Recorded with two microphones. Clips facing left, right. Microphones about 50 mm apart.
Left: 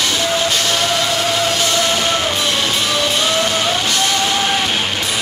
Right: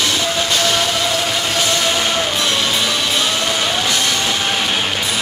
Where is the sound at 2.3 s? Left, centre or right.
Centre.